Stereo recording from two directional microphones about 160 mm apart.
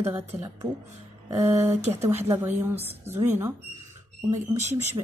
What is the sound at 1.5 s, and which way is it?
Speech, 40° right (ahead or behind).